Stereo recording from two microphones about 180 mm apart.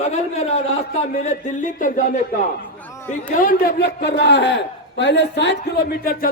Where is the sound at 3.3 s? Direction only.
50° left (ahead or behind).